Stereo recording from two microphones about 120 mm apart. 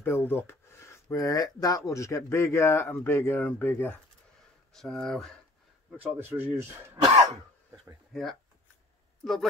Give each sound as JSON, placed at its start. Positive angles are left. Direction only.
{"t": 0.0, "sound": "speech", "side_deg": 15}
{"t": 4.7, "sound": "speech", "side_deg": 5}
{"t": 5.9, "sound": "speech", "side_deg": -15}
{"t": 8.1, "sound": "speech", "side_deg": 0}